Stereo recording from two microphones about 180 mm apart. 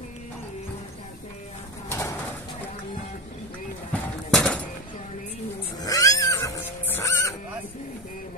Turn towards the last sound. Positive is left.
turn(degrees=15)  # may be behind; listen again after turning